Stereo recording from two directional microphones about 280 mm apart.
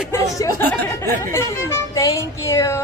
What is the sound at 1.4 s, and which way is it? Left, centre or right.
Speech, centre.